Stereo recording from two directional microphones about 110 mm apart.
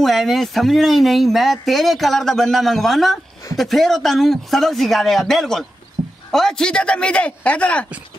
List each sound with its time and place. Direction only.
0.0 s speech: centre (ahead or behind)
6.0 s a sound: 40° right (ahead or behind)
6.3 s speech: 5° left (ahead or behind)